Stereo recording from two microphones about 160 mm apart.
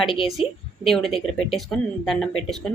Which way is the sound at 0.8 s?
Centre (ahead or behind).